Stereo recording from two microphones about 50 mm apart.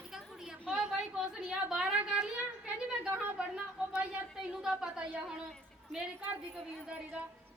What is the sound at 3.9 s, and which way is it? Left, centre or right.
A woman's voice, centre.